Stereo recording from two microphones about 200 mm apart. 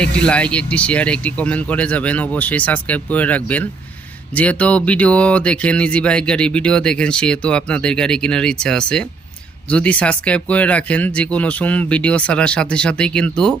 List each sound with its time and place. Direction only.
0.0 s speech: 5° left (ahead or behind)